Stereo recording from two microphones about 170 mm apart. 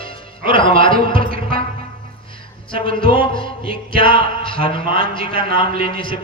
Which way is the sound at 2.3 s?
30° left (ahead or behind).